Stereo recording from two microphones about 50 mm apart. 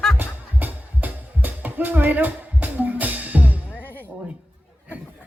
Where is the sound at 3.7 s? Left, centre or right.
Left.